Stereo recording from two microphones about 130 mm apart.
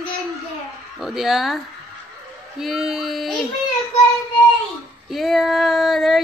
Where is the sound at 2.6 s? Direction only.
Centre (ahead or behind).